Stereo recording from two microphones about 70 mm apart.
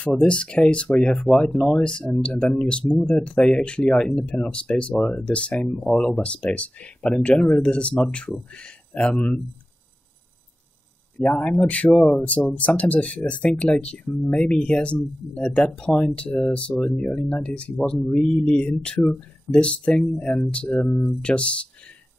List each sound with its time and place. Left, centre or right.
0.0 s speech: centre
5.7 s speech: centre
6.2 s speech: centre
11.2 s speech: centre
20.7 s speech: left
21.2 s speech: centre